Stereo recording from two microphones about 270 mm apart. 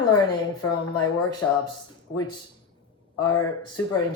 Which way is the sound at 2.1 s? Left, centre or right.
Centre.